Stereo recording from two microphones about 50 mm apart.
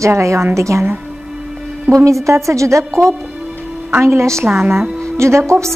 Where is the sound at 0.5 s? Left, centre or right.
Right.